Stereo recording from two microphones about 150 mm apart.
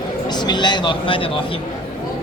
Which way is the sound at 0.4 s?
30° left (ahead or behind).